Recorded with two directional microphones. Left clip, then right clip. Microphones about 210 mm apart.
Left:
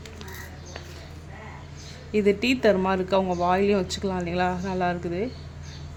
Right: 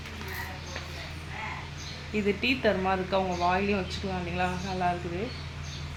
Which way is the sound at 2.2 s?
65° left (ahead or behind).